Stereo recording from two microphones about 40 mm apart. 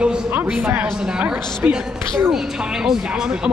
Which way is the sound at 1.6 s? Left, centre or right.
Right.